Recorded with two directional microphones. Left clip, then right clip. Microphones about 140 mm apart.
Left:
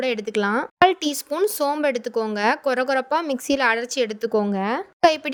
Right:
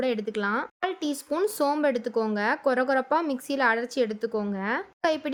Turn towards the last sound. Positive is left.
turn(degrees=45)  # may be behind; listen again after turning